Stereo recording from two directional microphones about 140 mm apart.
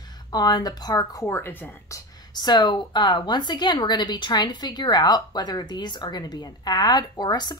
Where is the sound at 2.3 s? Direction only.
30° left (ahead or behind).